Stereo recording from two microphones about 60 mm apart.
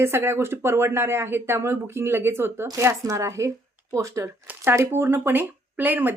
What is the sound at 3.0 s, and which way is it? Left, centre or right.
Speech, right.